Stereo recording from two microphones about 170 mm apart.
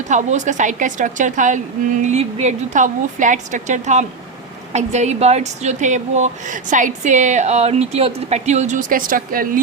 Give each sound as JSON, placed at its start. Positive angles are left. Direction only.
{"t": 0.0, "sound": "a woman's voice", "side_deg": -45}